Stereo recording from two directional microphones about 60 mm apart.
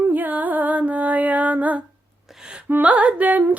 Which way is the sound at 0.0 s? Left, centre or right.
Right.